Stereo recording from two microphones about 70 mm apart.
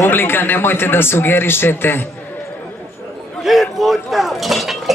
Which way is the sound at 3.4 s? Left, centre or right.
Centre.